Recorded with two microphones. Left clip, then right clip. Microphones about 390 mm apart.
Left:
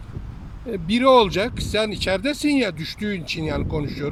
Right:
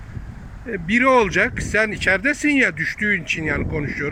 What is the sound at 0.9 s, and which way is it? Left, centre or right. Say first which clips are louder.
Speech: even; centre.